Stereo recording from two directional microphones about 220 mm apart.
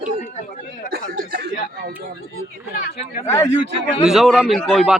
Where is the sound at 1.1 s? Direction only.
45° right (ahead or behind).